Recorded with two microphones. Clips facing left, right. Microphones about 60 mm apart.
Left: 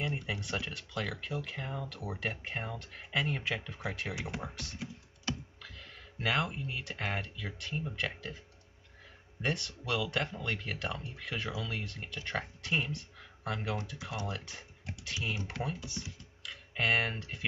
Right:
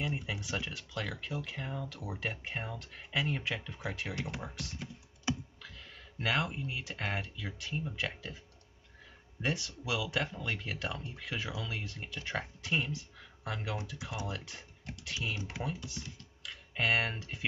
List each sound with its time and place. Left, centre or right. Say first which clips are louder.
0.0 s speech: left 1 dB; centre
5.3 s computer keyboard: right 3 dB; centre
5.6 s speech: left 1 dB; centre
9.4 s speech: even; centre